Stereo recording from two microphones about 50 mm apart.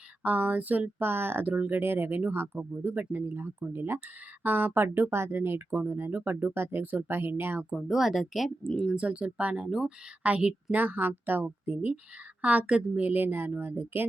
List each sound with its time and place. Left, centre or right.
0.2 s a woman's voice: right
0.9 s speech: right
6.1 s speech: right
7.8 s speech: centre
8.4 s speech: centre
8.9 s speech: right
9.6 s speech: centre
10.2 s a woman's voice: right
13.0 s speech: right